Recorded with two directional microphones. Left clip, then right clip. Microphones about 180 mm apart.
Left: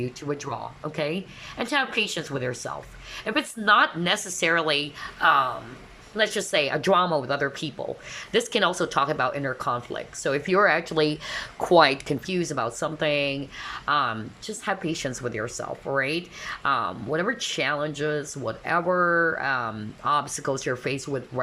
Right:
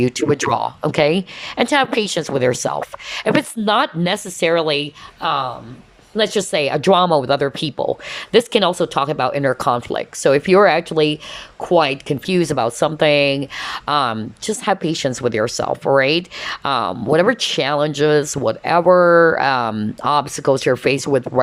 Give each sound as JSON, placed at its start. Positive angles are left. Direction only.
{"t": 0.0, "sound": "speech", "side_deg": -40}
{"t": 9.4, "sound": "speech", "side_deg": -30}
{"t": 12.3, "sound": "speech", "side_deg": -25}